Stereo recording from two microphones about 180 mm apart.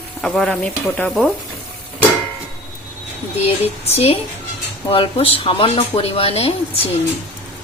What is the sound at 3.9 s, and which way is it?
Speech, 35° left (ahead or behind).